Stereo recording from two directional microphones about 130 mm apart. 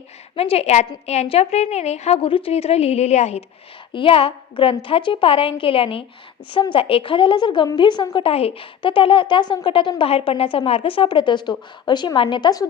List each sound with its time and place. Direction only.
0.3 s a woman's voice: 50° left (ahead or behind)
3.9 s a woman's voice: 45° left (ahead or behind)